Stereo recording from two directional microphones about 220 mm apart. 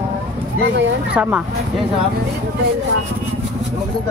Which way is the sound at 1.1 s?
5° right (ahead or behind).